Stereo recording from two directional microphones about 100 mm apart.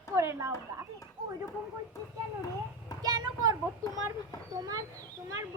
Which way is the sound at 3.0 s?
40° right (ahead or behind).